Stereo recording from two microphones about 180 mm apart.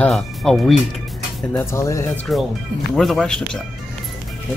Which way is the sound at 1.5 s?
15° left (ahead or behind).